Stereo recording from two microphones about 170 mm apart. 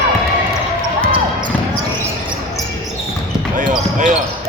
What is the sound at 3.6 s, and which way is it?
Basketball bounce, 45° right (ahead or behind).